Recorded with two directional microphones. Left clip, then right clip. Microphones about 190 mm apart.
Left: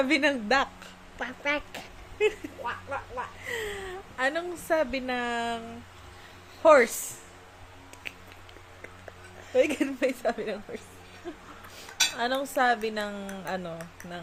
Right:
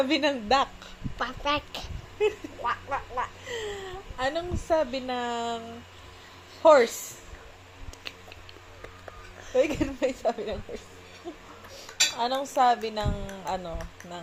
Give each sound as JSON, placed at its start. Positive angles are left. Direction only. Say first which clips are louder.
{"t": 0.0, "sound": "a woman's voice", "louder": "left 1 dB", "side_deg": 15}
{"t": 2.6, "sound": "frog", "louder": "right 5 dB", "side_deg": 0}
{"t": 3.4, "sound": "a woman's voice", "louder": "left 1 dB", "side_deg": 20}
{"t": 9.5, "sound": "a woman's voice", "louder": "even", "side_deg": 10}
{"t": 12.1, "sound": "speech", "louder": "right 1 dB", "side_deg": 20}